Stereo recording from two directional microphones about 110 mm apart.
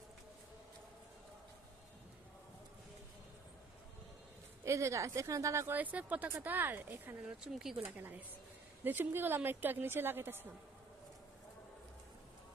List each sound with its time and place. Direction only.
4.6 s speech: 25° right (ahead or behind); by 7.8 s 5° right (ahead or behind)
7.9 s a woman's voice: 15° right (ahead or behind)